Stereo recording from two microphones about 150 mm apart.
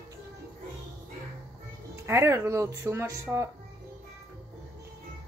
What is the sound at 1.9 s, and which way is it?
Speech, 20° right (ahead or behind).